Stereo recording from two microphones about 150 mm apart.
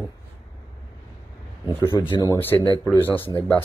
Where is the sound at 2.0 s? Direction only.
30° left (ahead or behind).